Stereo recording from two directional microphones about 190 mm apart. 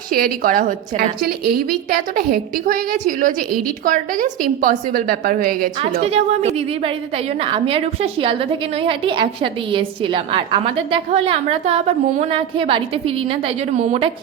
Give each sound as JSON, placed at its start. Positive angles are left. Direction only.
{"t": 0.4, "sound": "a woman's voice", "side_deg": -45}
{"t": 5.8, "sound": "a woman's voice", "side_deg": -30}